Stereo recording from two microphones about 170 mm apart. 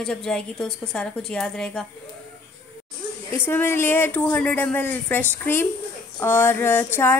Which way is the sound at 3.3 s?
10° left (ahead or behind).